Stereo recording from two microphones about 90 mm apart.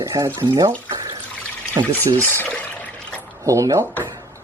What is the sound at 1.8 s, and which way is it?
Speech, 40° right (ahead or behind).